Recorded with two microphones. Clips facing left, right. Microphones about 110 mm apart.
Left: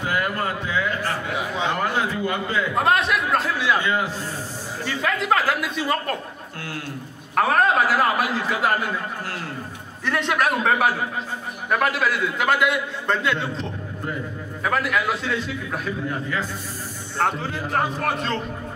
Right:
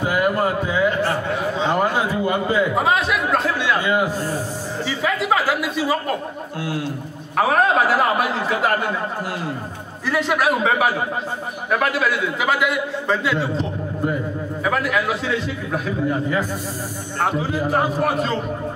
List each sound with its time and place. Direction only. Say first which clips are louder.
0.0 s a sound: right 5 dB; 10° right (ahead or behind)
2.7 s speech: right 1 dB; centre (ahead or behind)
3.8 s a man's voice: right 4 dB; 15° right (ahead or behind)
7.3 s a man's voice: right 2 dB; centre (ahead or behind)
10.0 s a man's voice: right 3 dB; 5° right (ahead or behind)
17.2 s a man's voice: right 3 dB; 5° right (ahead or behind)